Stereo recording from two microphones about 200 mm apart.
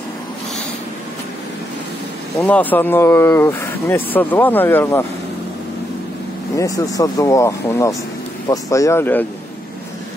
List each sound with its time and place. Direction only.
2.4 s speech: 10° left (ahead or behind)
6.5 s speech: 15° left (ahead or behind)